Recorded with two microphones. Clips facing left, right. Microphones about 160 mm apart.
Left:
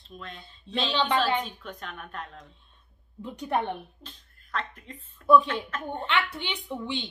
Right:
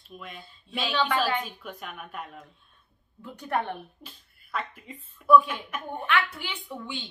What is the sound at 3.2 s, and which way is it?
Speech, 15° left (ahead or behind).